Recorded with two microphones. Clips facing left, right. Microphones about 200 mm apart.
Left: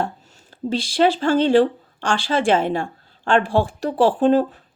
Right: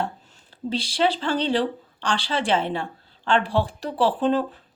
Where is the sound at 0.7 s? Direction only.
45° left (ahead or behind).